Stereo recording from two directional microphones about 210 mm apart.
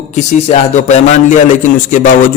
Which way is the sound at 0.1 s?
35° left (ahead or behind).